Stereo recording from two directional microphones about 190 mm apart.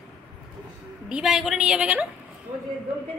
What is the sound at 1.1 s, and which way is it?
A woman's voice, 5° right (ahead or behind).